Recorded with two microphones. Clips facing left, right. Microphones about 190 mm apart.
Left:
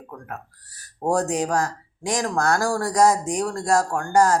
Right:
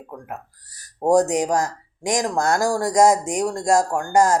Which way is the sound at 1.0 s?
20° right (ahead or behind).